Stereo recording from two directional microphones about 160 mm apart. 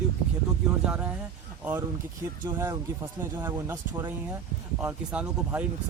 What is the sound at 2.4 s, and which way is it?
Speech, 25° right (ahead or behind).